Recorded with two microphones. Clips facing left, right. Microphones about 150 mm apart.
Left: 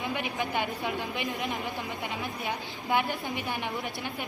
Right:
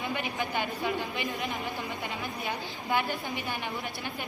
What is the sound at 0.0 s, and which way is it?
A woman's voice, 20° left (ahead or behind).